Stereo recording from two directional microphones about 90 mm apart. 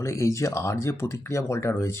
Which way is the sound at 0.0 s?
35° left (ahead or behind).